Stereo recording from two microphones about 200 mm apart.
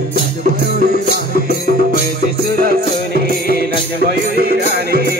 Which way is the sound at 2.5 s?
50° right (ahead or behind).